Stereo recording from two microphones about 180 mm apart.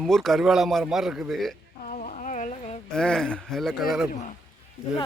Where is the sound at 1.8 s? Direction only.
40° left (ahead or behind).